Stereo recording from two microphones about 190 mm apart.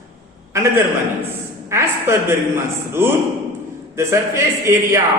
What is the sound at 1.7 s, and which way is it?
A man's voice, 10° right (ahead or behind).